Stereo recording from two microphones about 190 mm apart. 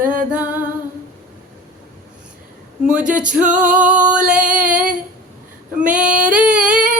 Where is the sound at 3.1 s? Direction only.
5° right (ahead or behind).